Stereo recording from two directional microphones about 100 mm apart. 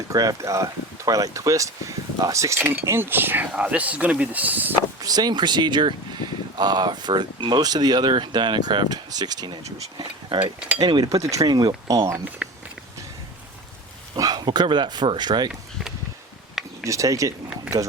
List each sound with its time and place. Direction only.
0.1 s speech: 35° right (ahead or behind); by 4.7 s 15° right (ahead or behind)
4.9 s speech: 40° right (ahead or behind)
10.3 s cutlery: 55° right (ahead or behind)
10.8 s speech: 45° right (ahead or behind); by 12.2 s 30° right (ahead or behind)
12.4 s a sound: 15° right (ahead or behind)
14.2 s speech: 45° right (ahead or behind)
16.8 s speech: 30° right (ahead or behind)